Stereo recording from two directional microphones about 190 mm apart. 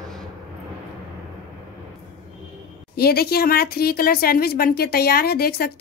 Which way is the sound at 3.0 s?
55° left (ahead or behind).